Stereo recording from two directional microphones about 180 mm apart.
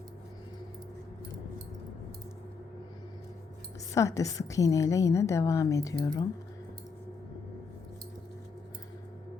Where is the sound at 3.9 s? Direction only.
15° left (ahead or behind).